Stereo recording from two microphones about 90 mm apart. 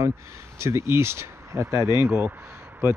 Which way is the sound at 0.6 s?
30° right (ahead or behind).